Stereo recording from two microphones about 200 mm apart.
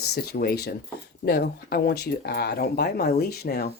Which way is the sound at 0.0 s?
55° left (ahead or behind).